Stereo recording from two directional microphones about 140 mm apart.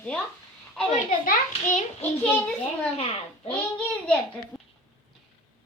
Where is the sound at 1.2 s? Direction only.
65° left (ahead or behind).